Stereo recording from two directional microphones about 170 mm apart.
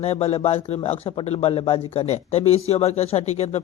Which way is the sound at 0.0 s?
35° left (ahead or behind).